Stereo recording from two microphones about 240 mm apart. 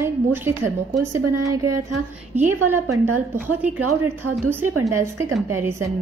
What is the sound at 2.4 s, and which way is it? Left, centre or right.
Speech, centre.